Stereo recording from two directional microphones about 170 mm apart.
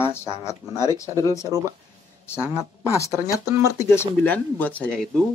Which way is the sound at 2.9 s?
20° left (ahead or behind).